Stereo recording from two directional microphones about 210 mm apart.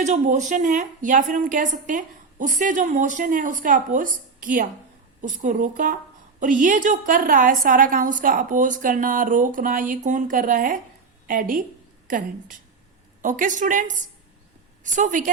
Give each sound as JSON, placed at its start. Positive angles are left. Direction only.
{"t": 0.0, "sound": "a woman's voice", "side_deg": -35}
{"t": 14.9, "sound": "a woman's voice", "side_deg": -35}